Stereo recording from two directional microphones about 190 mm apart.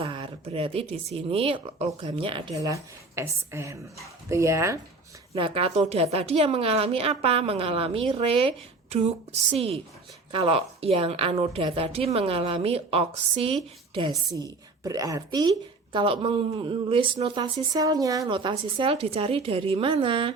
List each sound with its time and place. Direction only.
0.0 s a woman's voice: 30° right (ahead or behind)
5.3 s a woman's voice: 30° right (ahead or behind)